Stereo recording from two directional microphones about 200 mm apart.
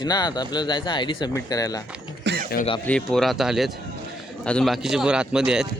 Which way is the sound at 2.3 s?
55° right (ahead or behind).